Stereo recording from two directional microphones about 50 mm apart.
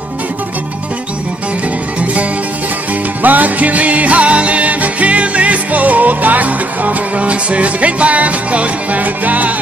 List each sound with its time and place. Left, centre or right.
3.2 s music: right